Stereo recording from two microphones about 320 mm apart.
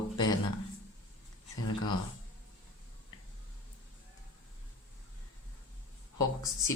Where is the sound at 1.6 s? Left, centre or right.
Left.